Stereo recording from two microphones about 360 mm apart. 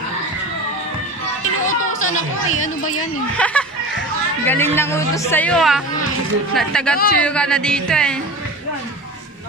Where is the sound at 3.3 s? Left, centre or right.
Centre.